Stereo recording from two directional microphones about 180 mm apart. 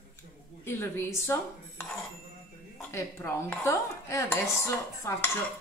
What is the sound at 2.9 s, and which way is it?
Dishes, 15° left (ahead or behind).